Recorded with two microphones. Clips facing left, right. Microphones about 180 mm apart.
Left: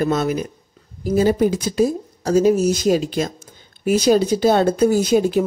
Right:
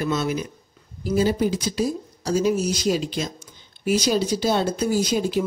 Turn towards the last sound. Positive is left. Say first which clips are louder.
# left 6 dB
turn(degrees=55)  # may be behind; listen again after turning